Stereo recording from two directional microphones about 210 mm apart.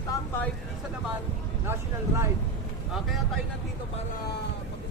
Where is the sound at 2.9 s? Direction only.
Centre (ahead or behind).